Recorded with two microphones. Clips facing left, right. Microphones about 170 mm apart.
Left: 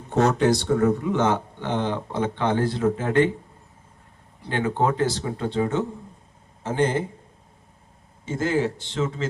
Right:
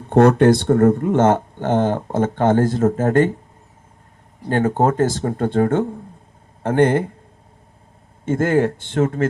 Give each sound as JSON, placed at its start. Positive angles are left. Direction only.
{"t": 0.1, "sound": "speech", "side_deg": -55}
{"t": 4.4, "sound": "a man's voice", "side_deg": -45}
{"t": 8.2, "sound": "a man's voice", "side_deg": -55}